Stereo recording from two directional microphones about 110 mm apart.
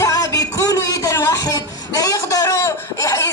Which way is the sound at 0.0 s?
35° left (ahead or behind).